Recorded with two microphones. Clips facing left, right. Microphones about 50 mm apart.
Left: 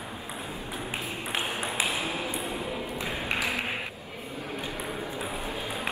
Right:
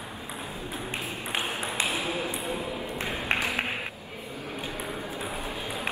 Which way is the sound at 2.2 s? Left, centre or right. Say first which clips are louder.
Right 1 dB; right.